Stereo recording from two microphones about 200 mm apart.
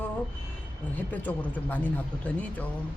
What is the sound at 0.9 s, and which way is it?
Speech, 10° left (ahead or behind).